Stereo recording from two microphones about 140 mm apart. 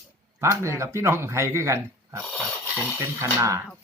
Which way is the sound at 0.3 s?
20° right (ahead or behind).